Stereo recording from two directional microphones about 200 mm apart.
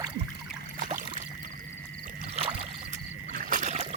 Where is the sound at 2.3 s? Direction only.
30° right (ahead or behind).